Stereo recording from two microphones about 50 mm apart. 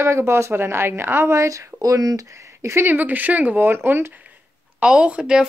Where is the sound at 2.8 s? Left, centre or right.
Right.